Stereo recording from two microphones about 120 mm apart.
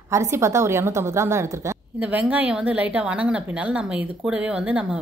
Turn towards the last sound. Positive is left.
turn(degrees=-10)  # may be behind; listen again after turning